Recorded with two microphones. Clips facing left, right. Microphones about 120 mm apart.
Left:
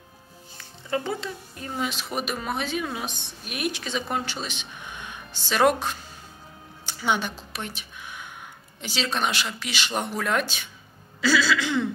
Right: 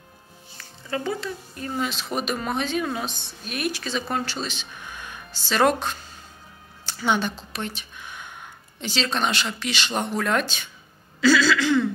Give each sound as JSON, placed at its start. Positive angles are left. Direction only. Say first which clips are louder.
{"t": 0.6, "sound": "speech", "louder": "left 1 dB", "side_deg": 25}
{"t": 1.8, "sound": "a woman's voice", "louder": "right 1 dB", "side_deg": 10}
{"t": 11.1, "sound": "a sound", "louder": "right 4 dB", "side_deg": 10}